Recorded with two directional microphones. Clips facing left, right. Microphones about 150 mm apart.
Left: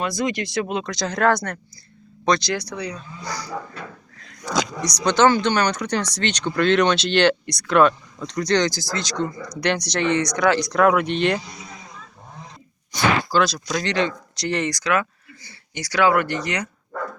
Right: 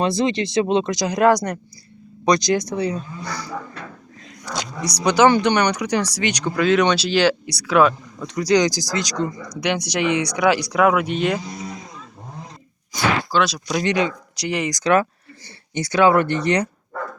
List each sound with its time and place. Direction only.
0.0 s speech: 25° right (ahead or behind)
5.0 s speech: 15° right (ahead or behind)
12.9 s speech: 5° right (ahead or behind)
13.7 s speech: 15° right (ahead or behind)
15.8 s speech: 25° right (ahead or behind)